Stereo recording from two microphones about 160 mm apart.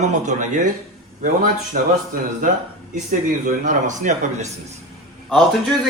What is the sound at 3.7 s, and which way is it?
Speech, 50° right (ahead or behind).